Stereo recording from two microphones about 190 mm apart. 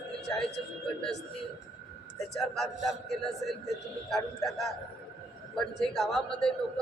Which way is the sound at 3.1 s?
Centre (ahead or behind).